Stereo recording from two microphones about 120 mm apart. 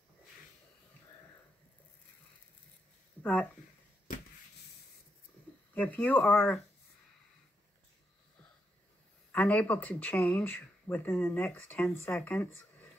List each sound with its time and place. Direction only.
3.2 s a sound: 15° left (ahead or behind)
5.8 s speech: 15° left (ahead or behind)
9.3 s speech: 10° left (ahead or behind)